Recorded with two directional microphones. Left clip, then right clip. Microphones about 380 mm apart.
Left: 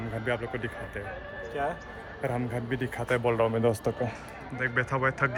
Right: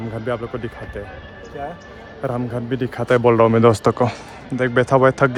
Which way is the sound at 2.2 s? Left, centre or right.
Centre.